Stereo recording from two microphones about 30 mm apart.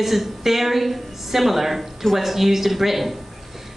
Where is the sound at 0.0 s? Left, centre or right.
Centre.